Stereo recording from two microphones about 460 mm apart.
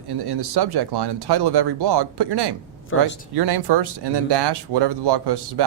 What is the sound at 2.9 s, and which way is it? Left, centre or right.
Speech, left.